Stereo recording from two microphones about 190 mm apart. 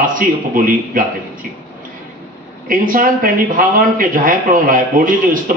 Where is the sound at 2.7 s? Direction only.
45° right (ahead or behind).